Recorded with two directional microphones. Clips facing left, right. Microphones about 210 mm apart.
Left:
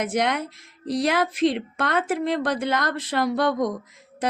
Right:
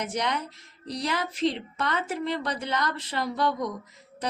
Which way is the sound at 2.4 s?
50° left (ahead or behind).